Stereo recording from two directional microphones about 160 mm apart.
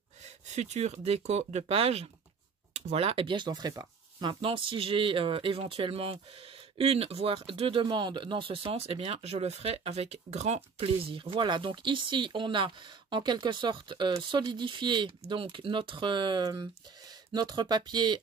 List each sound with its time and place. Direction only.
0.5 s speech: 45° right (ahead or behind); by 18.2 s 25° right (ahead or behind)